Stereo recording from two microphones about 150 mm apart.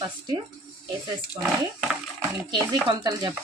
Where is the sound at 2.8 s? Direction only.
30° right (ahead or behind).